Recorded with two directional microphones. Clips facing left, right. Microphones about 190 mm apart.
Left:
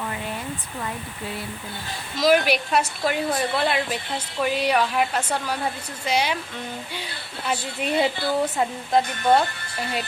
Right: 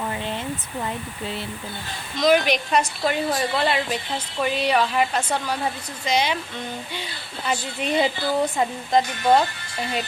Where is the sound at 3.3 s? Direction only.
10° right (ahead or behind).